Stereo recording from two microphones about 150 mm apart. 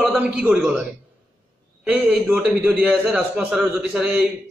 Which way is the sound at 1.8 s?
10° right (ahead or behind).